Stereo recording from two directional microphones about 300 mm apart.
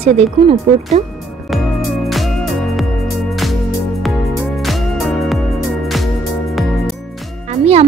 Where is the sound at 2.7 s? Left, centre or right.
Centre.